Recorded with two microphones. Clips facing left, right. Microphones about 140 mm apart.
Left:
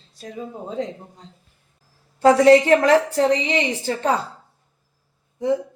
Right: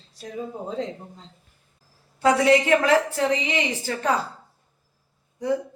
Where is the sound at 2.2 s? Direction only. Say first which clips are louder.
Left 6 dB; 35° left (ahead or behind).